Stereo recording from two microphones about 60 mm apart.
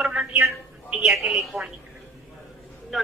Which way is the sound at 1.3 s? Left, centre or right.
Centre.